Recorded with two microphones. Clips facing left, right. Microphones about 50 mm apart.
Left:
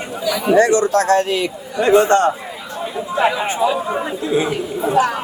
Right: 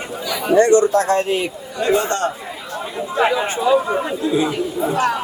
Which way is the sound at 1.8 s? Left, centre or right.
Left.